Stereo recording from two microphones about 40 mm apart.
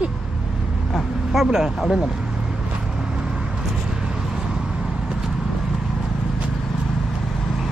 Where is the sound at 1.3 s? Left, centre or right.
Centre.